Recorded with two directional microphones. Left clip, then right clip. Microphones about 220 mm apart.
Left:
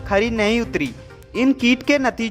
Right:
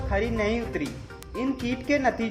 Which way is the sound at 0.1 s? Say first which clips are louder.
Left 8 dB; 35° left (ahead or behind).